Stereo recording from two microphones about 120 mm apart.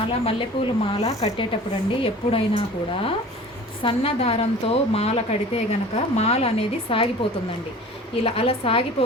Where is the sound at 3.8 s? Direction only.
50° left (ahead or behind).